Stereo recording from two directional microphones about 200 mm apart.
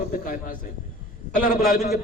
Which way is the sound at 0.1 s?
45° left (ahead or behind).